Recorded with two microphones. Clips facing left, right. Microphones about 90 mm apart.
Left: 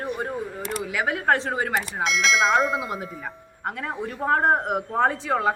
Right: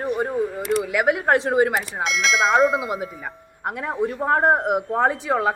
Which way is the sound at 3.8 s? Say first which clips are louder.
Right 6 dB; 15° right (ahead or behind).